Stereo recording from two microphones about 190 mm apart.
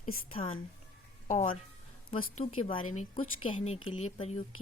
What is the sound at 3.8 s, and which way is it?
Speech, 90° left.